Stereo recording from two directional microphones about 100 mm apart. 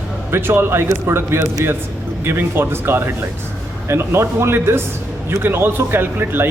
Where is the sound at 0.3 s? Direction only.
25° right (ahead or behind).